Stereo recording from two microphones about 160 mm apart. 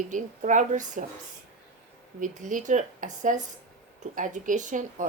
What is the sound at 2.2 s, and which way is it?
A woman's voice, 55° right (ahead or behind).